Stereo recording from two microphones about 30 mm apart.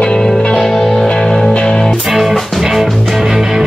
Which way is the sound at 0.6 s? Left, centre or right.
Centre.